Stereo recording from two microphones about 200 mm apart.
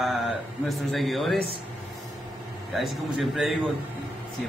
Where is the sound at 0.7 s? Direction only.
Centre (ahead or behind).